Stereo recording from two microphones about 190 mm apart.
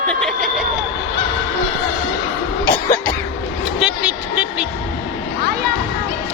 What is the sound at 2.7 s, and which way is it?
Music, 10° left (ahead or behind).